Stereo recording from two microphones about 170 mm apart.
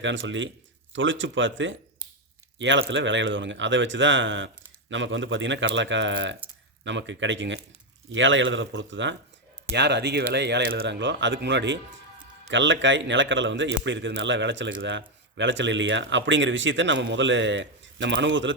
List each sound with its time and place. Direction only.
0.0 s a man's voice: 90° right